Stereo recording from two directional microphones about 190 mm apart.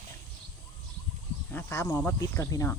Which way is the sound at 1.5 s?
10° left (ahead or behind).